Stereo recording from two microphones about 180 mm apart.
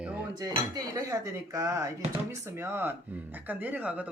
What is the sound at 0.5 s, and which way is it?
Speech, 20° right (ahead or behind).